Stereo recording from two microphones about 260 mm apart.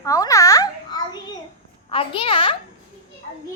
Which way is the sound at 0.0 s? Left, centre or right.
Centre.